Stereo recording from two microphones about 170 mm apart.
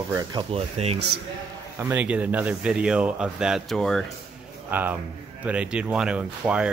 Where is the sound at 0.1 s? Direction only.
25° right (ahead or behind).